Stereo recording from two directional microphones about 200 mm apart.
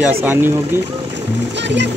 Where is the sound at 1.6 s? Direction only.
60° right (ahead or behind).